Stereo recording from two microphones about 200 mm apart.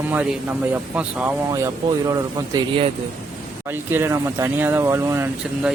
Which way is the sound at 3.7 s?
10° right (ahead or behind).